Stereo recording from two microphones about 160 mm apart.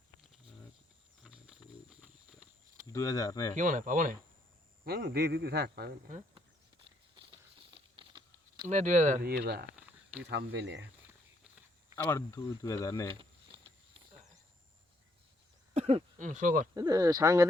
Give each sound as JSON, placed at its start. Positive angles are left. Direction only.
{"t": 1.2, "sound": "horse", "side_deg": -5}
{"t": 2.8, "sound": "speech", "side_deg": 20}
{"t": 3.5, "sound": "speech", "side_deg": -55}
{"t": 4.9, "sound": "a man's voice", "side_deg": -75}
{"t": 7.2, "sound": "a sound", "side_deg": -30}
{"t": 8.6, "sound": "speech", "side_deg": -50}
{"t": 9.2, "sound": "speech", "side_deg": -75}
{"t": 10.2, "sound": "speech", "side_deg": -90}
{"t": 11.9, "sound": "speech", "side_deg": 15}
{"t": 15.7, "sound": "speech", "side_deg": -40}
{"t": 16.7, "sound": "speech", "side_deg": -25}